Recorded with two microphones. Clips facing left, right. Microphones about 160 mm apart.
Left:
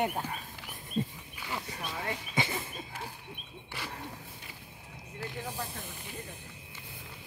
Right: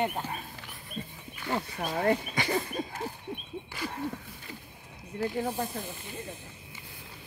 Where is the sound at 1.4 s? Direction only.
45° right (ahead or behind).